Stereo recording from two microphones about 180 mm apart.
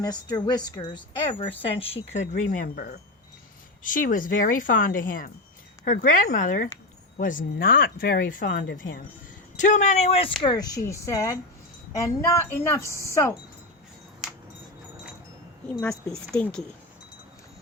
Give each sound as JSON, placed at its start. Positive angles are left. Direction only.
{"t": 0.0, "sound": "speech", "side_deg": 25}
{"t": 2.1, "sound": "speech", "side_deg": 45}
{"t": 10.4, "sound": "a woman's voice", "side_deg": 20}
{"t": 12.9, "sound": "speech", "side_deg": -15}
{"t": 16.3, "sound": "speech", "side_deg": 5}